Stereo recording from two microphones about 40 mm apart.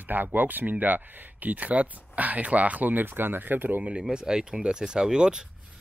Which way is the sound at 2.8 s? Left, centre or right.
Right.